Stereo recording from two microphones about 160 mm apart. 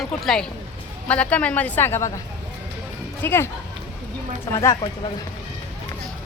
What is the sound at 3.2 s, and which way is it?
Speech, 15° left (ahead or behind).